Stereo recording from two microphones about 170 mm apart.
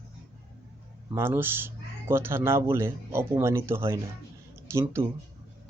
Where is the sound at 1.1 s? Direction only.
15° right (ahead or behind).